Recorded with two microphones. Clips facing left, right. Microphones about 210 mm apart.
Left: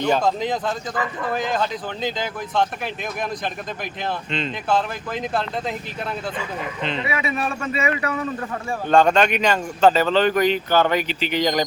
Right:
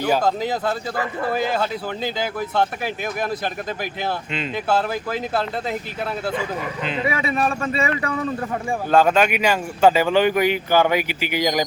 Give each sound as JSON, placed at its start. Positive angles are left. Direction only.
{"t": 0.0, "sound": "speech", "side_deg": -5}
{"t": 4.3, "sound": "speech", "side_deg": -5}
{"t": 7.1, "sound": "a man's voice", "side_deg": -35}
{"t": 8.9, "sound": "speech", "side_deg": -5}